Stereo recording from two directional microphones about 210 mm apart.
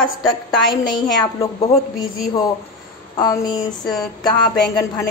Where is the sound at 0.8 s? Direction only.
20° left (ahead or behind).